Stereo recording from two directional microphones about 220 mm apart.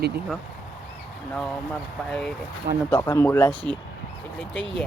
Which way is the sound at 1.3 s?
Centre (ahead or behind).